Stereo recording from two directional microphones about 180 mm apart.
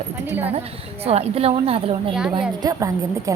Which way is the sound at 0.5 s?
35° right (ahead or behind).